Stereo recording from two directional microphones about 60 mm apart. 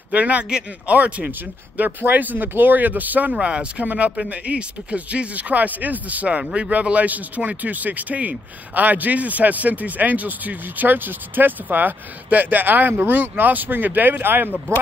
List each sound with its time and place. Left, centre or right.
0.1 s speech: right